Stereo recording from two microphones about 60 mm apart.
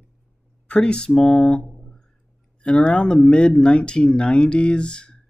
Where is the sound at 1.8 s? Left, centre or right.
Centre.